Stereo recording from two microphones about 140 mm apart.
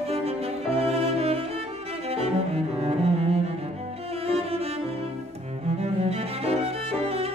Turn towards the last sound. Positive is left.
turn(degrees=-45)  # may be behind; listen again after turning